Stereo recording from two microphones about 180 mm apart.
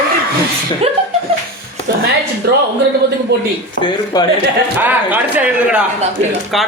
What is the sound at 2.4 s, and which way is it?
Speech, 60° right (ahead or behind).